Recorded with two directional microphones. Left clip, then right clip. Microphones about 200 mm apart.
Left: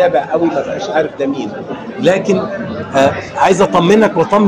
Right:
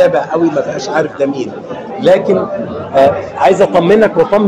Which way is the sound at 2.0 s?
40° left (ahead or behind).